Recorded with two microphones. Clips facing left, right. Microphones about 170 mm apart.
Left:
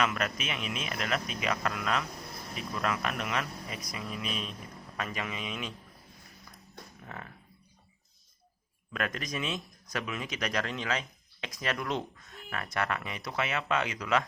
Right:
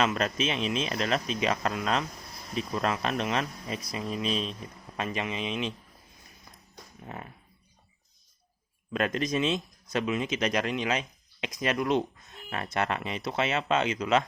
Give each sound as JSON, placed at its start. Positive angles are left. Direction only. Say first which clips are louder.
{"t": 0.0, "sound": "speech", "louder": "right 4 dB", "side_deg": -25}
{"t": 7.0, "sound": "speech", "louder": "right 4 dB", "side_deg": -20}
{"t": 8.9, "sound": "speech", "louder": "right 7 dB", "side_deg": -25}